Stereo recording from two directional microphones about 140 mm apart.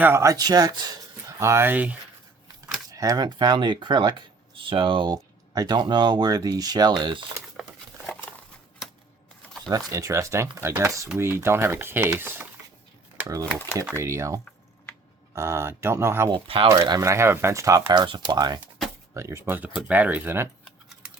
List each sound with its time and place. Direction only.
0.0 s speech: 20° right (ahead or behind)
2.9 s speech: 25° right (ahead or behind)
7.6 s patter: centre (ahead or behind)
9.6 s speech: 25° right (ahead or behind)
13.1 s typewriter: 20° right (ahead or behind)
13.4 s speech: 10° left (ahead or behind)
14.0 s speech: 20° right (ahead or behind)
16.3 s speech: 40° right (ahead or behind)
16.6 s speech: 25° right (ahead or behind)
20.7 s typing: 5° right (ahead or behind)